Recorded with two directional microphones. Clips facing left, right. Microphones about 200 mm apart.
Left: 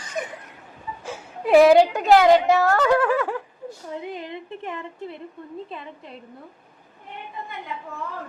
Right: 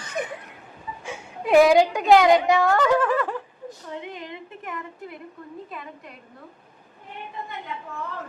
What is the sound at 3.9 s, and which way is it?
A woman's voice, 35° left (ahead or behind).